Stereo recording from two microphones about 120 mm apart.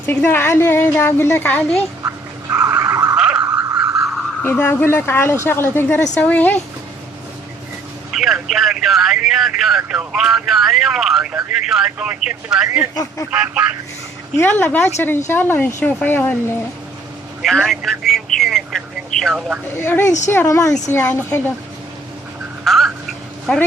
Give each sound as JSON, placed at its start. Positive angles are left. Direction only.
{"t": 0.0, "sound": "a woman's voice", "side_deg": 15}
{"t": 2.0, "sound": "a sound", "side_deg": -30}
{"t": 3.2, "sound": "a sound", "side_deg": -5}
{"t": 3.4, "sound": "a sound", "side_deg": -35}
{"t": 3.8, "sound": "vehicle", "side_deg": -5}
{"t": 4.4, "sound": "a woman's voice", "side_deg": 15}
{"t": 8.1, "sound": "a man's voice", "side_deg": 0}
{"t": 12.9, "sound": "speech", "side_deg": 30}
{"t": 13.3, "sound": "speech", "side_deg": -10}
{"t": 14.3, "sound": "a woman's voice", "side_deg": 15}
{"t": 17.4, "sound": "a man's voice", "side_deg": 5}
{"t": 19.6, "sound": "speech", "side_deg": 20}
{"t": 22.6, "sound": "a sound", "side_deg": 0}